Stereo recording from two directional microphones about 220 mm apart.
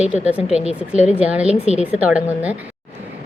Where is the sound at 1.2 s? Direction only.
5° right (ahead or behind).